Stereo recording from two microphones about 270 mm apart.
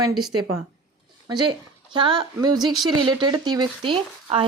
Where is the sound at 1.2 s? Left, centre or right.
Centre.